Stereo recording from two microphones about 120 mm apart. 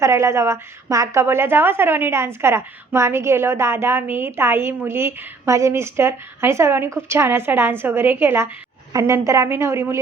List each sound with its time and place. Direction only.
0.0 s a woman's voice: 25° right (ahead or behind)